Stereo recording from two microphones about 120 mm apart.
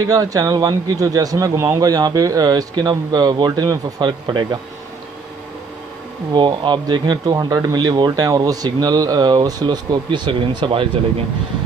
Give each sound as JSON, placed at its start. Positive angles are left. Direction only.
{"t": 0.0, "sound": "a man's voice", "side_deg": -30}
{"t": 6.3, "sound": "a man's voice", "side_deg": -40}